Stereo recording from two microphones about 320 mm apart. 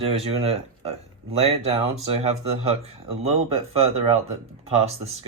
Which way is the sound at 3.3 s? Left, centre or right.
Centre.